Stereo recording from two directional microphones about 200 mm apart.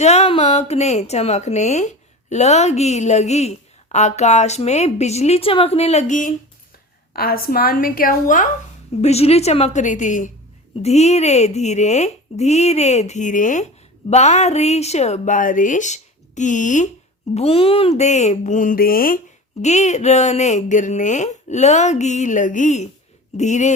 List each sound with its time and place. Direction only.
0.0 s a woman's voice: 30° left (ahead or behind)
9.0 s a woman's voice: 30° left (ahead or behind)
19.6 s a woman's voice: 35° left (ahead or behind)